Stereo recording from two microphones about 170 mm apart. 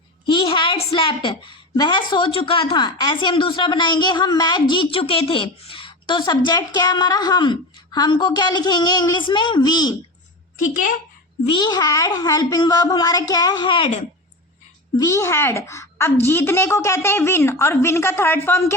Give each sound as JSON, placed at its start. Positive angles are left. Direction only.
{"t": 0.3, "sound": "a sound", "side_deg": 30}
{"t": 0.9, "sound": "a woman's voice", "side_deg": 30}
{"t": 11.4, "sound": "a woman's voice", "side_deg": 25}
{"t": 14.9, "sound": "a child's voice", "side_deg": 20}